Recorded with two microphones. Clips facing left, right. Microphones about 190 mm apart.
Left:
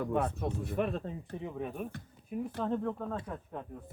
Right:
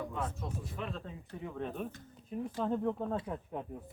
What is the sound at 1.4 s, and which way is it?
Speech, 15° left (ahead or behind).